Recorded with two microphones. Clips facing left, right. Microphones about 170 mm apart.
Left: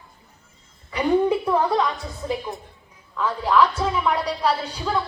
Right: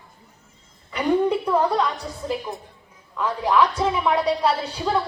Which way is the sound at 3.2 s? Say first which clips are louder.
Even; 15° right (ahead or behind).